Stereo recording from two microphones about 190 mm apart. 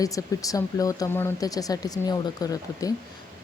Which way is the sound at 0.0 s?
20° left (ahead or behind).